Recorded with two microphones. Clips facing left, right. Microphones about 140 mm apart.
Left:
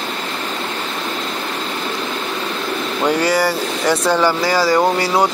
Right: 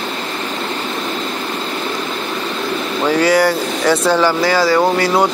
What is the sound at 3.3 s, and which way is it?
Speech, 10° left (ahead or behind).